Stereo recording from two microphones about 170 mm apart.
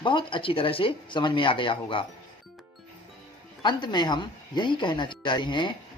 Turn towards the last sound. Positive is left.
turn(degrees=25)  # may be behind; listen again after turning